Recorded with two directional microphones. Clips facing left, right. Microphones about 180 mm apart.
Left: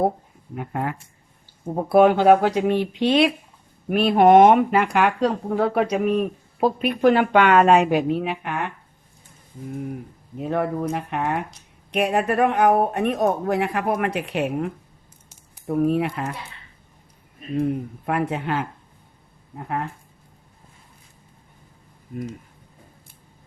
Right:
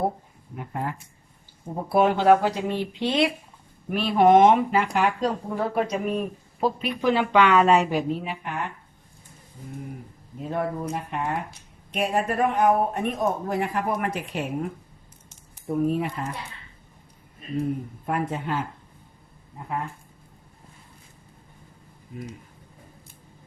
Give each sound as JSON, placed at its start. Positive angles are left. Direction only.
{"t": 0.5, "sound": "speech", "side_deg": 70}
{"t": 10.3, "sound": "speech", "side_deg": 70}
{"t": 18.0, "sound": "speech", "side_deg": 70}